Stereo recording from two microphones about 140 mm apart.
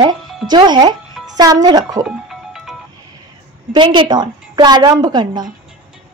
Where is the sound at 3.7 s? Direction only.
35° right (ahead or behind).